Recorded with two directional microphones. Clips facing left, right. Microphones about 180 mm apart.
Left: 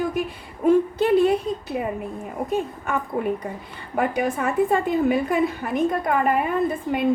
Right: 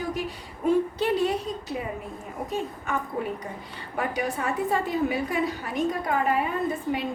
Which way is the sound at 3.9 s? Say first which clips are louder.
Left 6 dB; 55° left (ahead or behind).